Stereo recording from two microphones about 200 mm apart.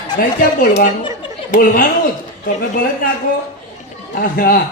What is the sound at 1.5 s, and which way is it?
Speech, 45° left (ahead or behind).